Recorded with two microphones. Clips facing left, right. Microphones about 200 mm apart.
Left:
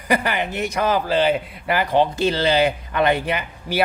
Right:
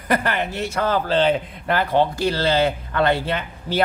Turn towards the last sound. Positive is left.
turn(degrees=15)  # may be behind; listen again after turning